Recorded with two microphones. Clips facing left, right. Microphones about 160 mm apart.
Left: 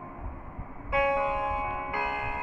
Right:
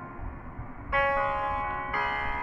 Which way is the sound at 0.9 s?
20° left (ahead or behind).